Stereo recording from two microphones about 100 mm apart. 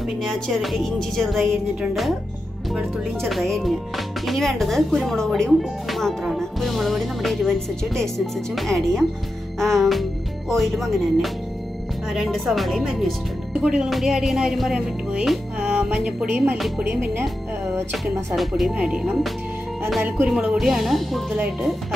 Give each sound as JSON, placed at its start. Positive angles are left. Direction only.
{"t": 0.3, "sound": "speech", "side_deg": 0}
{"t": 16.3, "sound": "music", "side_deg": -15}
{"t": 16.5, "sound": "speech", "side_deg": 0}
{"t": 17.9, "sound": "speech", "side_deg": 0}
{"t": 20.2, "sound": "speech", "side_deg": -5}